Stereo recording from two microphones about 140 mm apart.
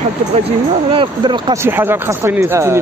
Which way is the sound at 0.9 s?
35° right (ahead or behind).